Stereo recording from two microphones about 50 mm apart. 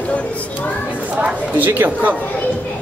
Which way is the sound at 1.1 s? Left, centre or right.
Right.